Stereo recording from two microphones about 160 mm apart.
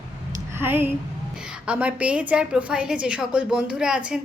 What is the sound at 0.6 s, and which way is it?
A woman's voice, 15° right (ahead or behind).